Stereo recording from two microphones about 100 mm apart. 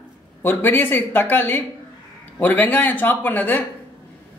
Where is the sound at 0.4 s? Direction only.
20° left (ahead or behind).